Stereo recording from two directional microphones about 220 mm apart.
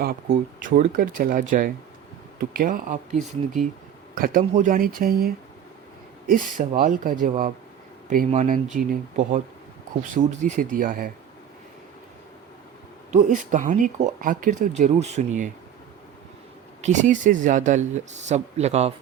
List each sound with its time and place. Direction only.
0.0 s speech: 40° right (ahead or behind)
3.2 s speech: centre (ahead or behind)
4.1 s speech: 40° right (ahead or behind)
13.1 s speech: 35° right (ahead or behind)
16.8 s speech: 35° right (ahead or behind)